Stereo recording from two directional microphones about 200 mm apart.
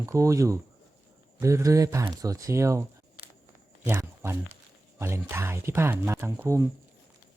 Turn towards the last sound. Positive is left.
turn(degrees=-15)  # may be behind; listen again after turning